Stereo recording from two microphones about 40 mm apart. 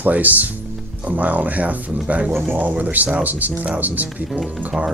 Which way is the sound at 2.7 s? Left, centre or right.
Right.